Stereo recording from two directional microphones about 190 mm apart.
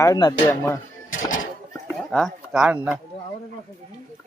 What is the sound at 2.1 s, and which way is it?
Speech, centre (ahead or behind).